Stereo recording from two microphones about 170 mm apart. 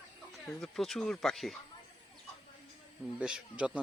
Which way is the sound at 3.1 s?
5° right (ahead or behind).